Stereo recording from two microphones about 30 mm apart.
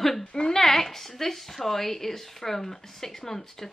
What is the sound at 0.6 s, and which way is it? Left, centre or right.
A woman's voice, centre.